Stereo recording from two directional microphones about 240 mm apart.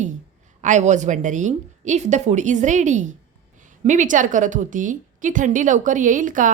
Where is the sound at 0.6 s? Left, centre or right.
Right.